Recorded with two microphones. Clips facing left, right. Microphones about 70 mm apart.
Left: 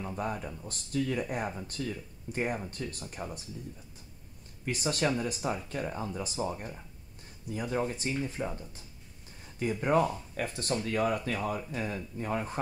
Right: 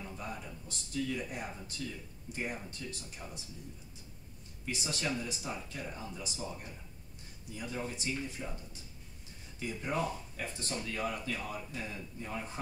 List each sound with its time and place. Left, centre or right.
0.0 s speech: left
4.6 s speech: left
9.6 s speech: left